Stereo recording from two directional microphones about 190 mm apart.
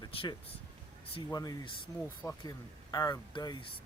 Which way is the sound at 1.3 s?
20° left (ahead or behind).